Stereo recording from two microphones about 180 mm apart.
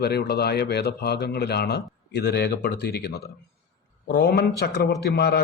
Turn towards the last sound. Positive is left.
turn(degrees=65)  # may be behind; listen again after turning